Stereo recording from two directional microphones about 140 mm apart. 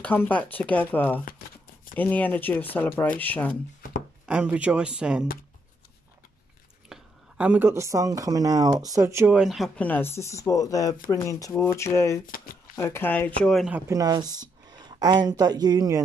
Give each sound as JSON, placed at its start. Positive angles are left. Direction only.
{"t": 0.0, "sound": "speech", "side_deg": 10}
{"t": 4.3, "sound": "speech", "side_deg": -10}
{"t": 6.9, "sound": "speech", "side_deg": -10}
{"t": 9.3, "sound": "speech", "side_deg": -5}
{"t": 9.8, "sound": "speech", "side_deg": 15}
{"t": 13.7, "sound": "speech", "side_deg": -20}